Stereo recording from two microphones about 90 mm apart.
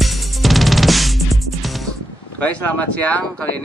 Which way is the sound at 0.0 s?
Centre (ahead or behind).